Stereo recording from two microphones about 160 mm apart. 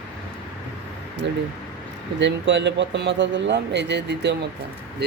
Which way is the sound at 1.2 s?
90° right.